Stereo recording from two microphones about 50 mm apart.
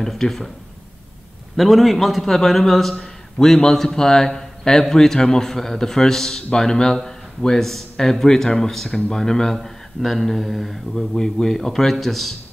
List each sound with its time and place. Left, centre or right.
0.0 s a man's voice: centre
1.6 s a man's voice: centre